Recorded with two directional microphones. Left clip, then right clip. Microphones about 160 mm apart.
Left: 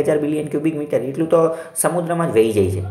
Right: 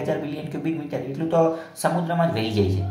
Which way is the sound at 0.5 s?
20° left (ahead or behind).